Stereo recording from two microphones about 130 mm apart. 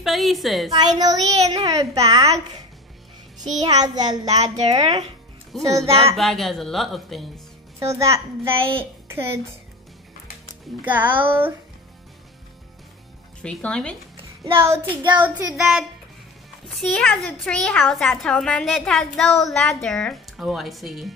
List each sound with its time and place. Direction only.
0.0 s a woman's voice: centre (ahead or behind)
0.7 s a child's voice: 30° right (ahead or behind)
3.6 s a child's voice: 30° right (ahead or behind)
6.1 s a woman's voice: centre (ahead or behind)
7.8 s a child's voice: 25° right (ahead or behind)
10.8 s a child's voice: 15° right (ahead or behind)
13.4 s speech: 5° left (ahead or behind)
14.4 s a child's voice: 20° right (ahead or behind)
15.5 s a woman's voice: centre (ahead or behind)